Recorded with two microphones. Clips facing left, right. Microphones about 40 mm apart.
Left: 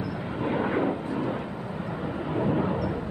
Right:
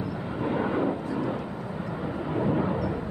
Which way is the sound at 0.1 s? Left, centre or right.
Centre.